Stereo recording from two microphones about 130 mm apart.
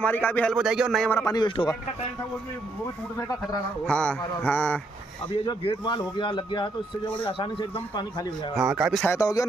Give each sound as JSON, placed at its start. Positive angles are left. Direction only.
{"t": 0.0, "sound": "a man's voice", "side_deg": 15}
{"t": 0.5, "sound": "speech", "side_deg": -5}
{"t": 1.2, "sound": "speech", "side_deg": 35}
{"t": 3.8, "sound": "a man's voice", "side_deg": 10}
{"t": 5.4, "sound": "speech", "side_deg": 40}
{"t": 8.5, "sound": "speech", "side_deg": -5}
{"t": 9.0, "sound": "speech", "side_deg": 25}